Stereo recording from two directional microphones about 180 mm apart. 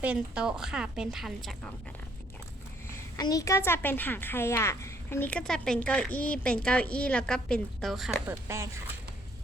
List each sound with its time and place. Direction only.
0.0 s a woman's voice: 5° right (ahead or behind)
2.9 s a woman's voice: 20° left (ahead or behind); by 8.1 s centre (ahead or behind)
8.3 s speech: 15° right (ahead or behind)